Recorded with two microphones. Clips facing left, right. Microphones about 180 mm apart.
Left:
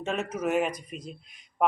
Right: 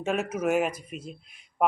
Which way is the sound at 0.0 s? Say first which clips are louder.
Right 2 dB; 10° right (ahead or behind).